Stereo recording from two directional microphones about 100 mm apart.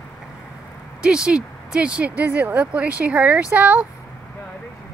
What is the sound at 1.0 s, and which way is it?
Speech, 10° right (ahead or behind).